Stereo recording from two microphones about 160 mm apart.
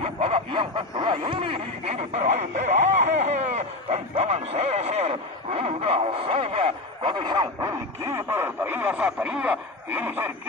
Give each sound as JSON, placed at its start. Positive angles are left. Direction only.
{"t": 0.0, "sound": "snicker", "side_deg": -35}
{"t": 8.1, "sound": "speech", "side_deg": -15}